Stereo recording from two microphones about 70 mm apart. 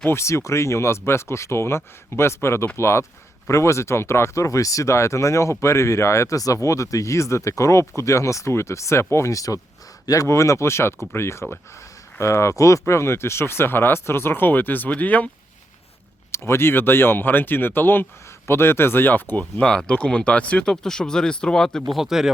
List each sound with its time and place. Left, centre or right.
0.0 s speech: left
16.3 s speech: left; by 21.8 s centre
21.9 s speech: centre